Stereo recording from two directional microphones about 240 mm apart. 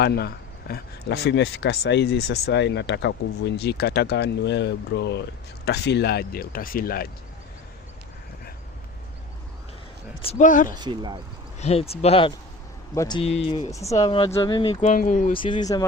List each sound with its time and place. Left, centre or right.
0.0 s speech: left
10.2 s speech: left
10.8 s speech: centre
11.6 s speech: left
15.4 s speech: centre